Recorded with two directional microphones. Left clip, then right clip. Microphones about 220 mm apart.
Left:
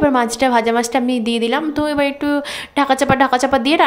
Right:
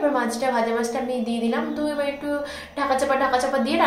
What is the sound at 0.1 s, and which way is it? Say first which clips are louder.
A woman's voice: left 8 dB; 45° left (ahead or behind).